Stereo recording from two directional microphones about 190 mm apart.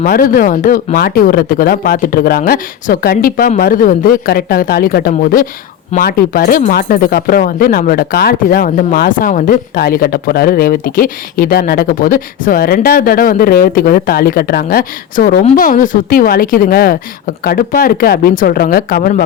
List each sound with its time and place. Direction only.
0.0 s speech: 45° left (ahead or behind)